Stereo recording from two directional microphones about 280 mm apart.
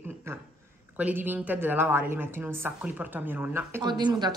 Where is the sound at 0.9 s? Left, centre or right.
Centre.